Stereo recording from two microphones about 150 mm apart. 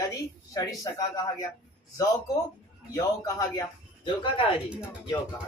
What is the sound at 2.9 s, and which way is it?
Speech, 25° left (ahead or behind).